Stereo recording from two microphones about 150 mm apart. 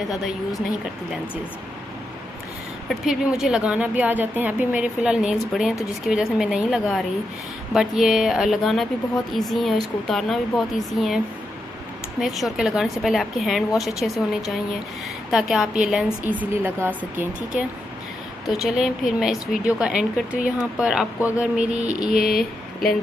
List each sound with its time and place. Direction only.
2.9 s a woman's voice: centre (ahead or behind)
12.2 s a woman's voice: centre (ahead or behind)
15.3 s a woman's voice: centre (ahead or behind)
22.3 s speech: 80° left